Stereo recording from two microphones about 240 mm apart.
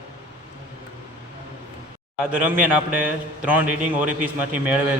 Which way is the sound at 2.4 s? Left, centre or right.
Centre.